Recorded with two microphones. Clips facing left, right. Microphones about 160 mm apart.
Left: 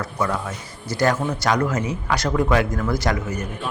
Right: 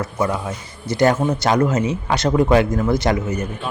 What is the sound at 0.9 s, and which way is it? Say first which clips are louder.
Speech: right 4 dB; 20° right (ahead or behind).